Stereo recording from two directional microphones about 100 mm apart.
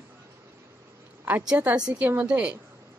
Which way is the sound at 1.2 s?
10° right (ahead or behind).